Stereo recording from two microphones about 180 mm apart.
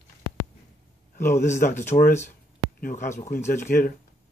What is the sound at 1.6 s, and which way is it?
Speech, 50° left (ahead or behind).